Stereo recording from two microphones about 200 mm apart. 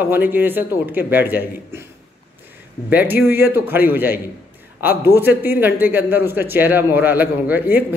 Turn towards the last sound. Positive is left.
turn(degrees=-10)  # may be behind; listen again after turning